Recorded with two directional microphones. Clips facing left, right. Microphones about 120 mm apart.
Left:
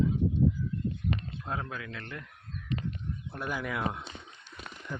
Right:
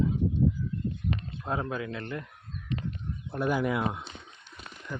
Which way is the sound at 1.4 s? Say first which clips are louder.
Right 5 dB; 20° right (ahead or behind).